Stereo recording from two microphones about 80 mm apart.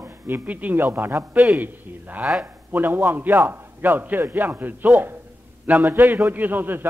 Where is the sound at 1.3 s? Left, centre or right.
Centre.